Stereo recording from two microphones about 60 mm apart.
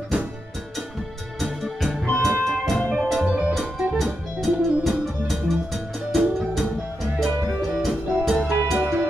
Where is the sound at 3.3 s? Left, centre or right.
Right.